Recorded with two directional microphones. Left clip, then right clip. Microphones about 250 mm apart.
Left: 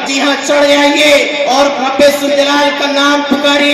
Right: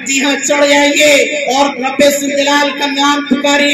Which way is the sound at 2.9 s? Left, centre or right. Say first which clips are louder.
Left 2 dB; right.